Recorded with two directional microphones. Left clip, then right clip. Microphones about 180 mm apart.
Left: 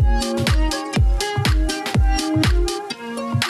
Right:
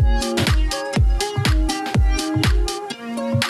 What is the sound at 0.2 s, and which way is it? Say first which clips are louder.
Music: right 1 dB; centre (ahead or behind).